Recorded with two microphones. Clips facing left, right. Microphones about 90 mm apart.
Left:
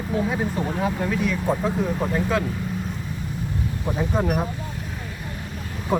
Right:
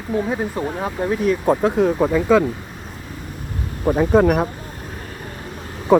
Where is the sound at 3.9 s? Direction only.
70° right (ahead or behind).